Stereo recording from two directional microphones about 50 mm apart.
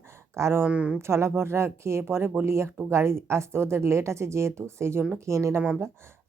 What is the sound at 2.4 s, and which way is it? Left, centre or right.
A woman's voice, right.